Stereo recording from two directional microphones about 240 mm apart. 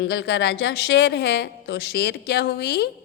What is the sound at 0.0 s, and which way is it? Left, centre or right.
A woman's voice, left.